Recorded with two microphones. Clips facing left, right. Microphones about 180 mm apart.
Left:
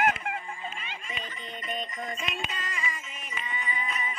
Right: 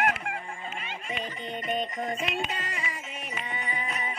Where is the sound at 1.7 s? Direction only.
65° right (ahead or behind).